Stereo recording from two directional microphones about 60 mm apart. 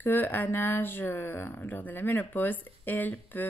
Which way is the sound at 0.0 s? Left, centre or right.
Left.